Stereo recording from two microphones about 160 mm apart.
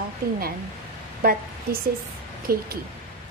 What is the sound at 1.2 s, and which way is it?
A woman's voice, 65° right (ahead or behind).